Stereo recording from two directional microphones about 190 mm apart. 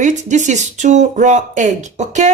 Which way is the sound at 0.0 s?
40° right (ahead or behind).